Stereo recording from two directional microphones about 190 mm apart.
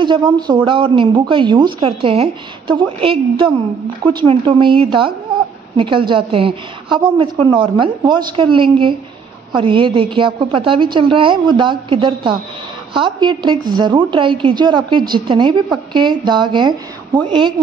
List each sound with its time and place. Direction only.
0.0 s a woman's voice: 25° right (ahead or behind)